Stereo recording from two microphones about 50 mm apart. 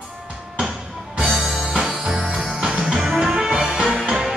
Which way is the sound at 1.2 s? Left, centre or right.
Centre.